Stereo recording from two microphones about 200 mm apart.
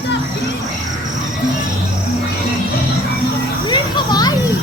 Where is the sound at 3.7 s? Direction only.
20° left (ahead or behind).